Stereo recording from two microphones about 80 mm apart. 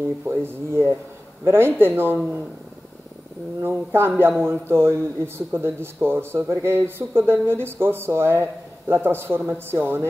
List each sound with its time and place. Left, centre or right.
0.2 s a man's voice: right
3.6 s a man's voice: right